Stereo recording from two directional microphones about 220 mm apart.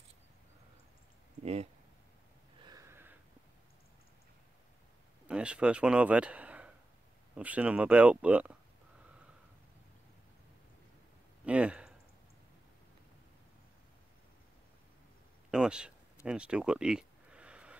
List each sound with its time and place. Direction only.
1.4 s speech: 30° right (ahead or behind)
2.6 s a sound: 15° right (ahead or behind)
5.3 s speech: 5° right (ahead or behind)
11.4 s speech: 5° right (ahead or behind)
15.5 s speech: 5° right (ahead or behind)
16.3 s a sound: 5° right (ahead or behind)